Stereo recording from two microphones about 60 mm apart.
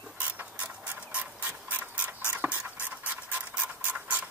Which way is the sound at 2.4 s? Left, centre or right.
Right.